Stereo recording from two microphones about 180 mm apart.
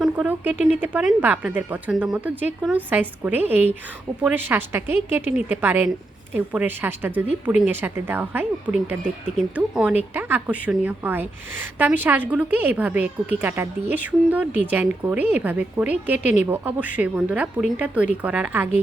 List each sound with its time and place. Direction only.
0.0 s speech: 5° right (ahead or behind)